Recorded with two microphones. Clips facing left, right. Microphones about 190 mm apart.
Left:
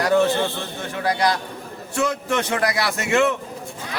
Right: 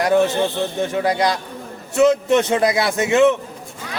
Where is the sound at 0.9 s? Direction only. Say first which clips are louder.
Right 1 dB; 25° right (ahead or behind).